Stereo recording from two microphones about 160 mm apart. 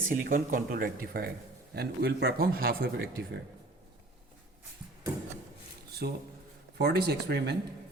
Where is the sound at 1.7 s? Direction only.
90° right; by 3.1 s 75° right (ahead or behind).